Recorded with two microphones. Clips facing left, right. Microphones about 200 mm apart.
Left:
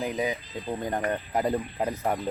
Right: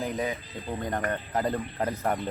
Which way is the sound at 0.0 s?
15° left (ahead or behind).